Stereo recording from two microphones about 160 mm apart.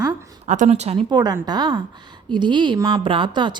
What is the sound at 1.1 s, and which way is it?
A woman's voice, 25° right (ahead or behind).